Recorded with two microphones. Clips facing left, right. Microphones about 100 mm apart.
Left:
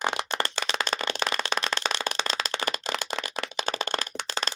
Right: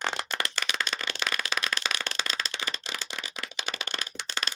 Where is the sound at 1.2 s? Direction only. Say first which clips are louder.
Left 4 dB; 30° left (ahead or behind).